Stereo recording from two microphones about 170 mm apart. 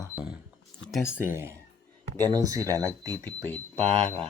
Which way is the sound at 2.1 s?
10° left (ahead or behind).